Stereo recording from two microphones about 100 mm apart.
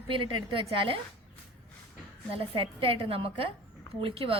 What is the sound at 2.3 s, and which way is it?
A woman's voice, 65° right (ahead or behind).